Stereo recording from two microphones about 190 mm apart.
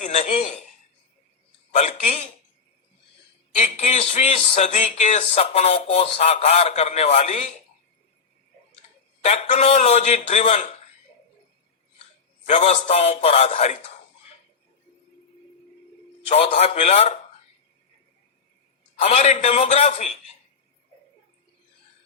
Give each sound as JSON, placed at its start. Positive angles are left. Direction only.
{"t": 0.0, "sound": "a man's voice", "side_deg": 35}
{"t": 1.7, "sound": "speech", "side_deg": 40}
{"t": 3.6, "sound": "speech", "side_deg": 35}
{"t": 9.2, "sound": "speech", "side_deg": 35}
{"t": 12.5, "sound": "speech", "side_deg": 40}
{"t": 16.3, "sound": "speech", "side_deg": 35}
{"t": 19.0, "sound": "speech", "side_deg": 35}